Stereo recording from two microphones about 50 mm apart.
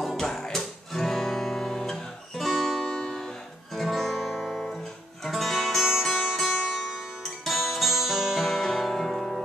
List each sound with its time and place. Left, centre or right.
0.0 s music: centre
2.9 s music: centre
3.7 s guitar: centre
5.2 s music: centre